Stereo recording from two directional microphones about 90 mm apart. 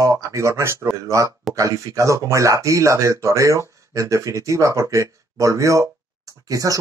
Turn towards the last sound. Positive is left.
turn(degrees=-40)  # may be behind; listen again after turning